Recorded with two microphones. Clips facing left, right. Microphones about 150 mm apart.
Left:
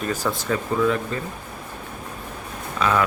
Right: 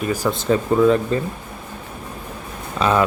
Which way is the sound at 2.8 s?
25° right (ahead or behind).